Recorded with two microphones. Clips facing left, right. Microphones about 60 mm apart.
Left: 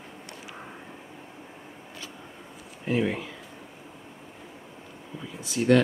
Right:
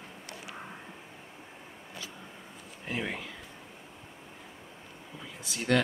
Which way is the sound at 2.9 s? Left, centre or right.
Centre.